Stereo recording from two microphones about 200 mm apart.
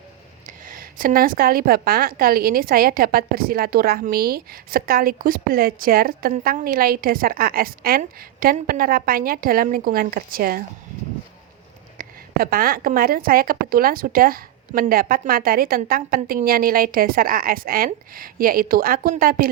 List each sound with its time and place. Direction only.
0.4 s a woman's voice: 45° right (ahead or behind)
11.9 s a woman's voice: 50° right (ahead or behind)